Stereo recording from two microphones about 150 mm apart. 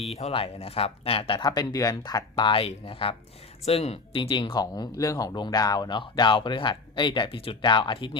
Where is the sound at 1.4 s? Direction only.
25° left (ahead or behind).